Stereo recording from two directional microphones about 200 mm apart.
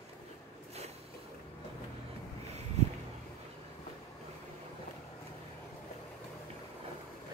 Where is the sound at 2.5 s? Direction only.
35° right (ahead or behind).